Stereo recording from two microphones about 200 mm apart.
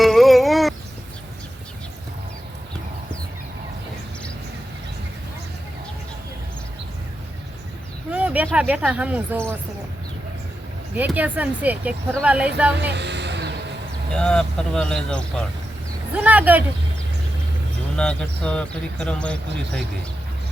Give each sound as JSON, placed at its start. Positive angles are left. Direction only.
{"t": 0.0, "sound": "a sound", "side_deg": 0}
{"t": 8.1, "sound": "a sound", "side_deg": -5}
{"t": 8.5, "sound": "speech", "side_deg": -5}
{"t": 10.9, "sound": "speech", "side_deg": -10}
{"t": 12.7, "sound": "music", "side_deg": -60}
{"t": 14.1, "sound": "speech", "side_deg": 5}
{"t": 16.1, "sound": "speech", "side_deg": -5}
{"t": 17.9, "sound": "speech", "side_deg": 5}